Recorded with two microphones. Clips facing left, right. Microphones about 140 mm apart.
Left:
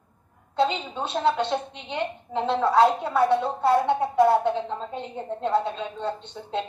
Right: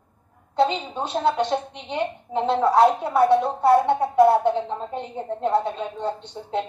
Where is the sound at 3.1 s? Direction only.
25° right (ahead or behind).